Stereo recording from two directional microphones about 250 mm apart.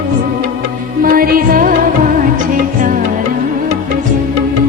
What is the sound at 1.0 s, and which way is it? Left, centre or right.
Music, right.